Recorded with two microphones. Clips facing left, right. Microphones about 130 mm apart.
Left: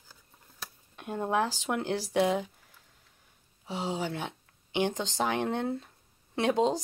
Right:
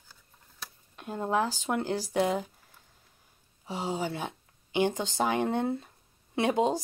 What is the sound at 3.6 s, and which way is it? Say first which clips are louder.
A woman's voice: right 1 dB; 5° right (ahead or behind).